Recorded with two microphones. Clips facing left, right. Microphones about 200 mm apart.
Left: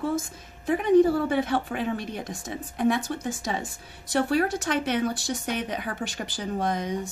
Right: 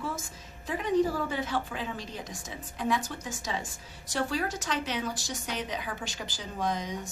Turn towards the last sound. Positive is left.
turn(degrees=60)  # may be behind; listen again after turning